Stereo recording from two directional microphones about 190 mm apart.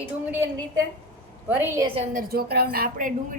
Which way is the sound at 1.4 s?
10° right (ahead or behind).